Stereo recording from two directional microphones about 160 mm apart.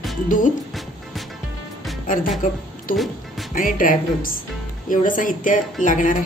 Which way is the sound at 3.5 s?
60° left (ahead or behind).